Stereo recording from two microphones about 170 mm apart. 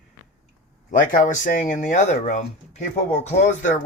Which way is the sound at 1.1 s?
50° left (ahead or behind).